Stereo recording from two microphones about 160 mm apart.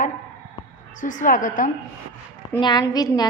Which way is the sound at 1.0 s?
55° left (ahead or behind).